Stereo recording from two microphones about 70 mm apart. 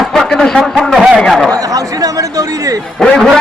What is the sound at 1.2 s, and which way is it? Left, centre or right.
Speech, centre.